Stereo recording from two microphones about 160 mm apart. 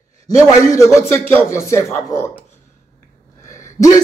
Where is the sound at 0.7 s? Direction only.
20° left (ahead or behind).